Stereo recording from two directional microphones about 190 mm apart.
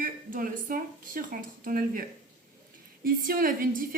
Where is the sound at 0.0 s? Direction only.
45° right (ahead or behind).